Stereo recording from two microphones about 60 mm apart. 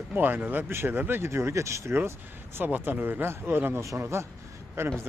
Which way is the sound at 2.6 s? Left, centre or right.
Right.